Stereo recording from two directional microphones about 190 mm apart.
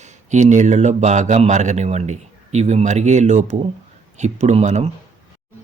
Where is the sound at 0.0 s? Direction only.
40° right (ahead or behind).